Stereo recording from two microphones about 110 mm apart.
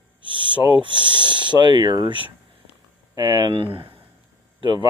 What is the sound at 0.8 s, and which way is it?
Speech, 45° right (ahead or behind).